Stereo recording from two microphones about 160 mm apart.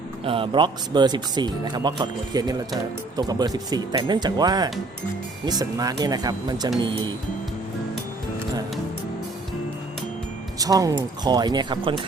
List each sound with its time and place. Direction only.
0.3 s speech: 35° right (ahead or behind)
10.6 s speech: 20° right (ahead or behind)